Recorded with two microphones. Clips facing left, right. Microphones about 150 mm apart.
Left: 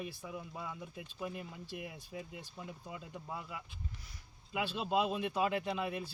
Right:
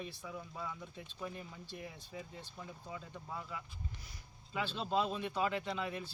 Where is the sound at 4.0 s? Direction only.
Centre (ahead or behind).